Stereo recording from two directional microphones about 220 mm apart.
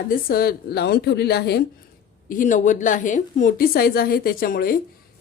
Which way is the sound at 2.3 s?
35° left (ahead or behind).